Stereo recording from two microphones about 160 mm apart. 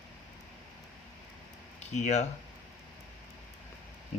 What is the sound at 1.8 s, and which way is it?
Speech, 45° left (ahead or behind).